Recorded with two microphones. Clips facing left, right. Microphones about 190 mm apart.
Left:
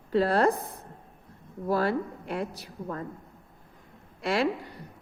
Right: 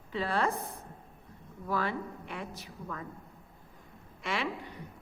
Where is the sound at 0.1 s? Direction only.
40° left (ahead or behind).